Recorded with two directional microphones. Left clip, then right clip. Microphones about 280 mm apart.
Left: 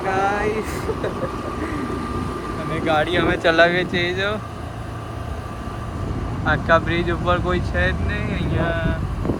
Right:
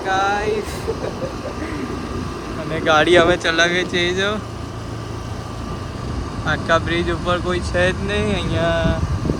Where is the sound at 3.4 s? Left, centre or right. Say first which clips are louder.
Left 1 dB; centre.